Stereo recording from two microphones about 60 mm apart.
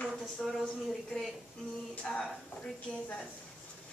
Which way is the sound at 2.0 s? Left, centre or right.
Centre.